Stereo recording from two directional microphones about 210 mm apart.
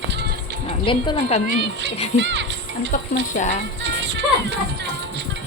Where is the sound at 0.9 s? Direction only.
25° left (ahead or behind).